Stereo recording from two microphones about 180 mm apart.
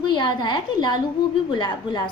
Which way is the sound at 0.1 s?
25° left (ahead or behind).